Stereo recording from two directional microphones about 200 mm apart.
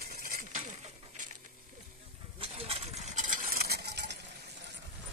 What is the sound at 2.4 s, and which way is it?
Stir, 30° right (ahead or behind).